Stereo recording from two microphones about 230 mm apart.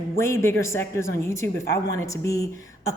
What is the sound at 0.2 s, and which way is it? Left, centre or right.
A woman's voice, centre.